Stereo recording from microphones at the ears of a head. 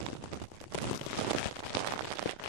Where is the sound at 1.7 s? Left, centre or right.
Right.